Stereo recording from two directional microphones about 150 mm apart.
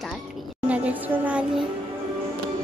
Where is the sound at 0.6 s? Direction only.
10° right (ahead or behind).